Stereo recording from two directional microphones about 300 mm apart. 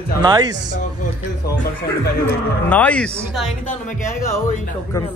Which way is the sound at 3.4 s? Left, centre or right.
Left.